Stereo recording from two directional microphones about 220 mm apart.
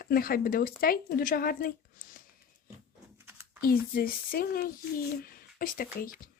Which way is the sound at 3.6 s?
45° left (ahead or behind).